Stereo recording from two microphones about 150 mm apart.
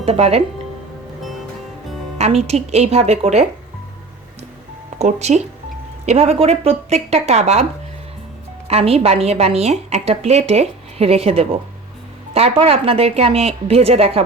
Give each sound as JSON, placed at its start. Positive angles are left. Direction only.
{"t": 0.0, "sound": "a woman's voice", "side_deg": -45}
{"t": 2.1, "sound": "a woman's voice", "side_deg": -45}
{"t": 4.9, "sound": "a woman's voice", "side_deg": -50}